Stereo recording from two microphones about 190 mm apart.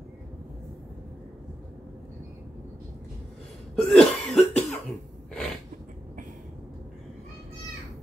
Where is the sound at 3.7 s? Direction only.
5° left (ahead or behind).